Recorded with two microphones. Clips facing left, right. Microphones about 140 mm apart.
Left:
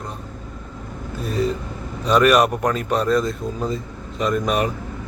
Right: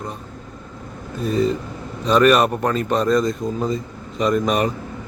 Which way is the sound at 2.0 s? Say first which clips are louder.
Right 1 dB; 5° left (ahead or behind).